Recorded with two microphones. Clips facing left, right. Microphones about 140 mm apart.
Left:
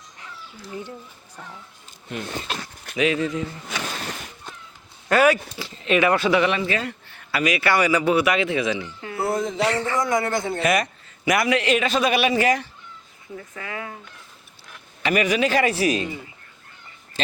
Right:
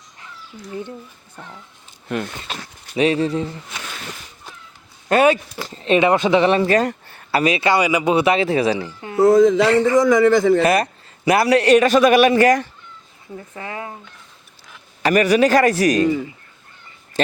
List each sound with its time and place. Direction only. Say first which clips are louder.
2.1 s speech: right 8 dB; 55° right (ahead or behind)
2.9 s speech: right 4 dB; 30° right (ahead or behind)
3.7 s a sound: left 3 dB; 90° left
5.0 s speech: right 3 dB; 25° right (ahead or behind)
5.5 s speech: right 4 dB; 40° right (ahead or behind); by 6.4 s 20° right (ahead or behind)
6.4 s speech: right 7 dB; 40° right (ahead or behind)
7.3 s speech: right 4 dB; 30° right (ahead or behind)
9.2 s a man's voice: right 11 dB; 90° right
10.6 s a man's voice: right 5 dB; 35° right (ahead or behind)
13.6 s speech: right 3 dB; 30° right (ahead or behind)
15.0 s a man's voice: right 6 dB; 40° right (ahead or behind)